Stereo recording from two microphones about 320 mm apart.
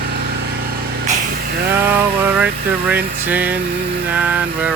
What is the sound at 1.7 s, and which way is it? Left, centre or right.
Speech, centre.